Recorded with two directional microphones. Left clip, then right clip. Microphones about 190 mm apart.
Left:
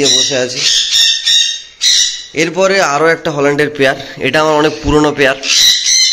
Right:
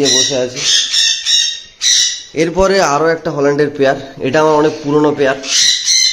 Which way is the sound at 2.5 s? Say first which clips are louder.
Left 1 dB; 15° right (ahead or behind).